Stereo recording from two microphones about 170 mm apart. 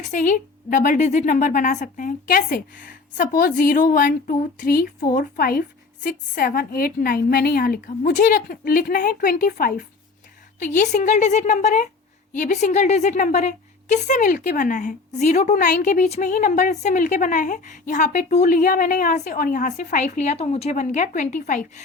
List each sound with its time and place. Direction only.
0.0 s a woman's voice: 50° left (ahead or behind)
10.8 s a woman's voice: 45° left (ahead or behind)